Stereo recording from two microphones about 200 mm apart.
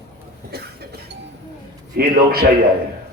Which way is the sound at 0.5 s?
55° right (ahead or behind).